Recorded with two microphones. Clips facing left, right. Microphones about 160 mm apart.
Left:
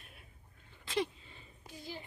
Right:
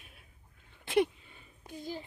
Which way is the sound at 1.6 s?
45° right (ahead or behind).